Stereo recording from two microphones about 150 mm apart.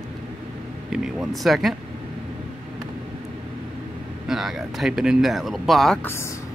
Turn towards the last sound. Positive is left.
turn(degrees=15)  # may be behind; listen again after turning